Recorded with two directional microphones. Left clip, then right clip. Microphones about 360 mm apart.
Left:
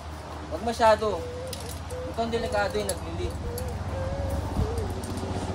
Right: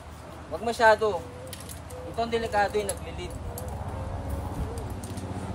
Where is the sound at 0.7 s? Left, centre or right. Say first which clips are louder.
Right 1 dB; right.